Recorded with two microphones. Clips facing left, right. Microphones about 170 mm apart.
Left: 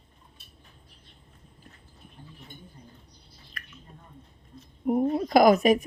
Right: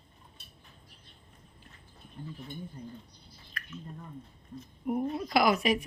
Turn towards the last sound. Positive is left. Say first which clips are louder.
# left 7 dB
turn(degrees=45)  # may be behind; listen again after turning